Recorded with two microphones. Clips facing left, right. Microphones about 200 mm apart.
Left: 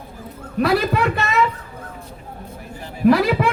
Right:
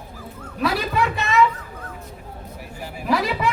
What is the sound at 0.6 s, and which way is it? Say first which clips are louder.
Speech: left 5 dB; 60° left (ahead or behind).